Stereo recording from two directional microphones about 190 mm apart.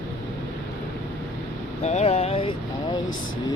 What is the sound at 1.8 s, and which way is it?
Vehicle, 35° left (ahead or behind).